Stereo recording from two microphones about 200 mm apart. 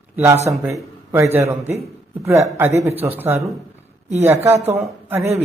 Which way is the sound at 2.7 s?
35° right (ahead or behind).